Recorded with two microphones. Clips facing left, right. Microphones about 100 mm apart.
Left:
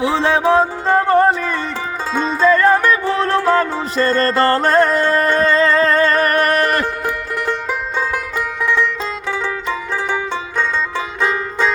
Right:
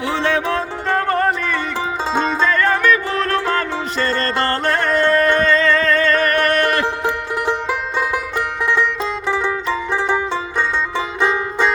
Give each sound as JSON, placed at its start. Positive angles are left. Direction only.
{"t": 0.0, "sound": "music", "side_deg": 30}
{"t": 2.1, "sound": "music", "side_deg": -30}
{"t": 2.5, "sound": "music", "side_deg": 30}
{"t": 7.0, "sound": "music", "side_deg": -15}